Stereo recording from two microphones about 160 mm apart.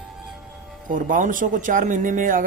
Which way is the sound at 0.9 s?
55° right (ahead or behind).